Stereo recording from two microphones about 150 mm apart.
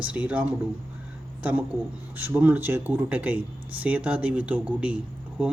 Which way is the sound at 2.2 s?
15° right (ahead or behind).